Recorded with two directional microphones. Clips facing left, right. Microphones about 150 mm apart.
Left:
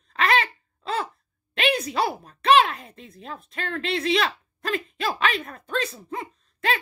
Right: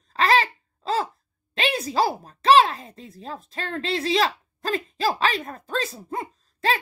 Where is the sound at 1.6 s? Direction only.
30° right (ahead or behind).